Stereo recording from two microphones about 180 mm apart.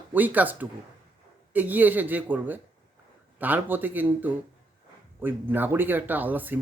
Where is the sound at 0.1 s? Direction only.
10° right (ahead or behind).